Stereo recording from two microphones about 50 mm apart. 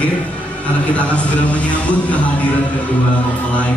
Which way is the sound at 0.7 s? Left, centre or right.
Left.